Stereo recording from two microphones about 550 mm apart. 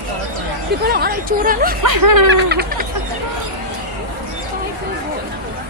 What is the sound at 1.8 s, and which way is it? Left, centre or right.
Speech, right.